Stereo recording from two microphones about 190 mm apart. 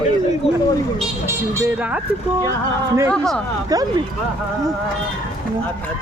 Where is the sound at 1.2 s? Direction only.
15° right (ahead or behind).